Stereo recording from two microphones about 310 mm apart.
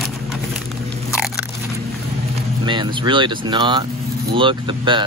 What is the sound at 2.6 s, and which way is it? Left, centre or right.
Speech, centre.